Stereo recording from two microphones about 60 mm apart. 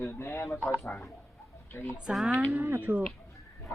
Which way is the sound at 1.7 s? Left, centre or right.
Left.